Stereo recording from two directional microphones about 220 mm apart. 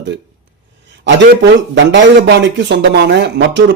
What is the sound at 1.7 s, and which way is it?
Speech, 55° right (ahead or behind).